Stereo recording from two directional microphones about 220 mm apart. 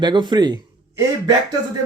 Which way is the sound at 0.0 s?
20° right (ahead or behind).